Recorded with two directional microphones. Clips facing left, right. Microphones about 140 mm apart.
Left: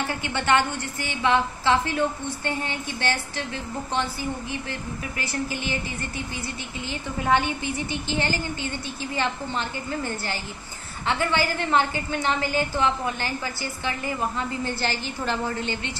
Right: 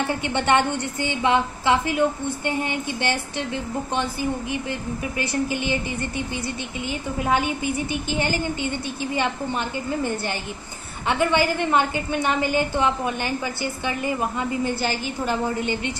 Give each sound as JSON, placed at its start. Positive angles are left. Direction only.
{"t": 0.0, "sound": "a woman's voice", "side_deg": -20}